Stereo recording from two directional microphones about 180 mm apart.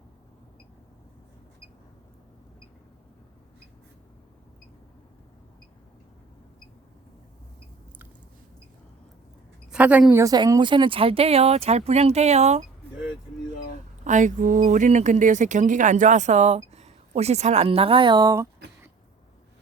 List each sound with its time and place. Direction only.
9.7 s a woman's voice: 5° right (ahead or behind); by 12.6 s 35° right (ahead or behind)
14.0 s speech: 45° right (ahead or behind); by 18.4 s 20° right (ahead or behind)